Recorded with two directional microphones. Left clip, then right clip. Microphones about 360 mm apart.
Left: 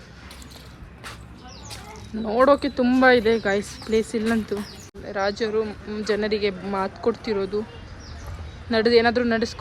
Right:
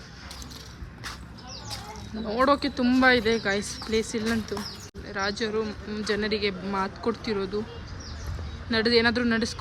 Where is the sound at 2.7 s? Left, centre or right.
Centre.